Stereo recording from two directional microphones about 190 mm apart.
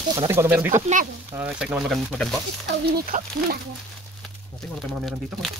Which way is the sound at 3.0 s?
45° right (ahead or behind).